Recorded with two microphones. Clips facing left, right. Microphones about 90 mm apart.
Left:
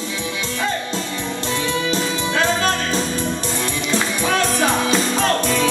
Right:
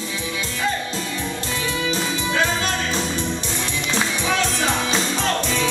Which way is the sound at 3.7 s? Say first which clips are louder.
Even; 45° left (ahead or behind).